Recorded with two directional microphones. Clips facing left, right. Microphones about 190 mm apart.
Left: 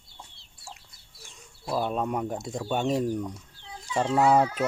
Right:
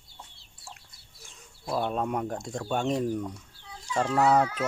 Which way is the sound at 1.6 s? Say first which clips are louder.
Left 1 dB; centre (ahead or behind).